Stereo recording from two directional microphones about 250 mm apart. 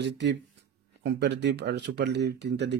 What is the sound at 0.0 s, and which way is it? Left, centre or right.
Speech, right.